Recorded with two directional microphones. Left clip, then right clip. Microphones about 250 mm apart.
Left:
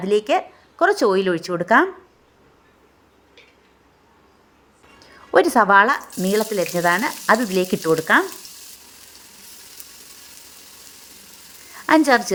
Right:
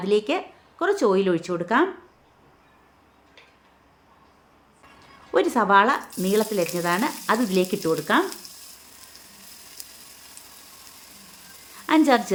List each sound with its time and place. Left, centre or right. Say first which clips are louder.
0.0 s speech: left 4 dB; left
5.3 s speech: left 5 dB; left
11.9 s a woman's voice: left 4 dB; left